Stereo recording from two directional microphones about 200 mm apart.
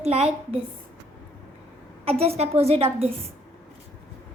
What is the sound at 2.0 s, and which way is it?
A woman's voice, 30° right (ahead or behind).